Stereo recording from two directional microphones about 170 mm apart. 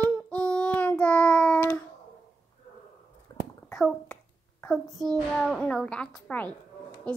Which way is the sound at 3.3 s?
25° left (ahead or behind).